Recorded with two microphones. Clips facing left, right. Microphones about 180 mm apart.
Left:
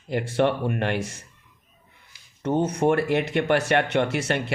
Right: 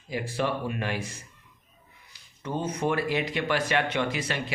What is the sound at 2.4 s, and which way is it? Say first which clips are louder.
Speech: left 8 dB; 70° left (ahead or behind).